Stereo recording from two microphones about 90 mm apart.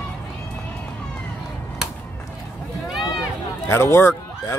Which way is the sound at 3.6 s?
30° left (ahead or behind).